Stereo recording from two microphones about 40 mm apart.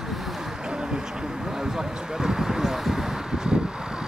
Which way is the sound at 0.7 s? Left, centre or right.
Centre.